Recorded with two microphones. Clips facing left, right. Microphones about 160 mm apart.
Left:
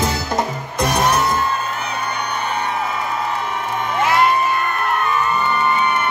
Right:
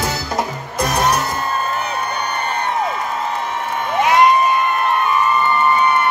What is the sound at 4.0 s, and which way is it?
Music, 20° right (ahead or behind).